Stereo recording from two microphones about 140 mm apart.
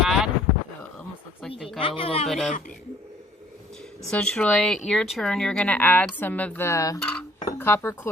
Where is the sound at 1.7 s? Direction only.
40° left (ahead or behind).